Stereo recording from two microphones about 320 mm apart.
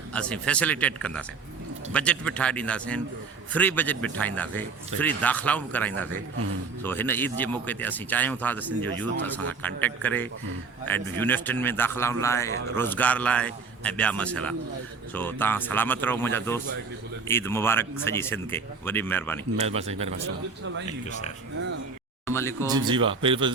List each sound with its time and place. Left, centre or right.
0.1 s a man's voice: centre
19.5 s speech: centre
20.8 s speech: left
22.3 s a man's voice: centre
22.6 s speech: centre